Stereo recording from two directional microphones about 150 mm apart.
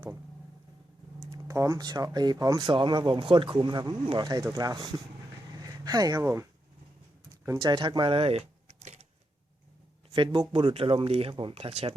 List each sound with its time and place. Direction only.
1.3 s speech: 20° right (ahead or behind)
5.5 s a sound: 25° right (ahead or behind)
7.4 s speech: 25° right (ahead or behind); by 9.0 s 50° right (ahead or behind)
10.5 s speech: 35° right (ahead or behind)